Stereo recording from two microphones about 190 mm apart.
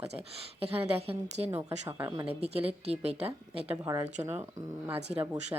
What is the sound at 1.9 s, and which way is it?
Speech, 15° right (ahead or behind).